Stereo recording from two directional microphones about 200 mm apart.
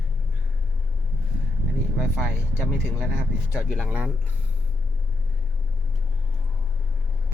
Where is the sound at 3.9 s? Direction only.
5° right (ahead or behind).